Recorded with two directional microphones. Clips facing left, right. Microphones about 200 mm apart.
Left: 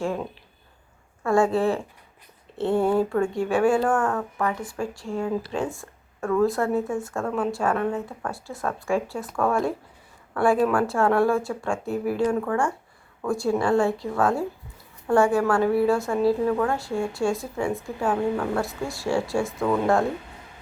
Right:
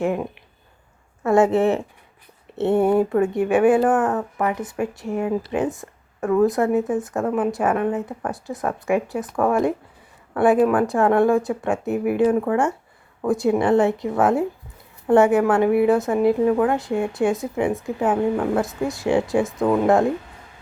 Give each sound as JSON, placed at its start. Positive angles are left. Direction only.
{"t": 0.0, "sound": "speech", "side_deg": -20}